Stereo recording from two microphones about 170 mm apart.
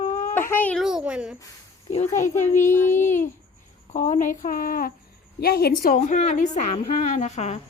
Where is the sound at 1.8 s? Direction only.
40° left (ahead or behind).